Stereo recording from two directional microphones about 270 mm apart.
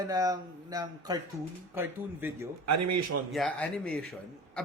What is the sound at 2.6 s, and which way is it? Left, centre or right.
Speech, right.